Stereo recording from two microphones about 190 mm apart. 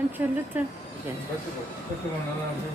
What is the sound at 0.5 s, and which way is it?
Speech, 10° right (ahead or behind).